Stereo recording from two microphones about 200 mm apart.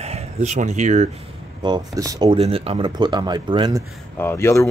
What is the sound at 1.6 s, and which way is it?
Speech, 20° right (ahead or behind).